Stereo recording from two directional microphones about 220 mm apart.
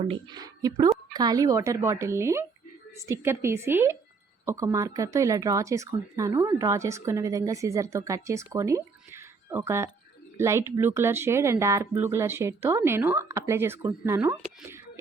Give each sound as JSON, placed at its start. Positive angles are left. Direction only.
{"t": 0.1, "sound": "speech", "side_deg": -20}